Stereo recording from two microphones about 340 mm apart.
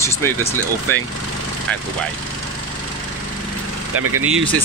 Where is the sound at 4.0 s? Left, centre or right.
Right.